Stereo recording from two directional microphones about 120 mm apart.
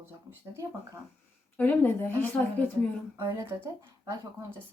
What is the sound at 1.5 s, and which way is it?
Speech, 15° left (ahead or behind).